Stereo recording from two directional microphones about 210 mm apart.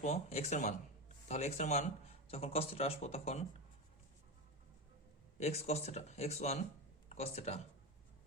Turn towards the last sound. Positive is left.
turn(degrees=30)  # may be behind; listen again after turning